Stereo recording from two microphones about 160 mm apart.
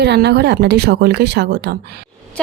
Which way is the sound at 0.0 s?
90° right.